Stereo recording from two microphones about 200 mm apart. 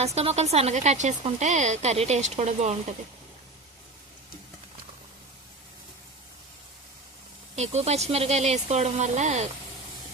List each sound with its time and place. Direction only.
0.0 s speech: 30° right (ahead or behind)
7.5 s speech: 35° right (ahead or behind)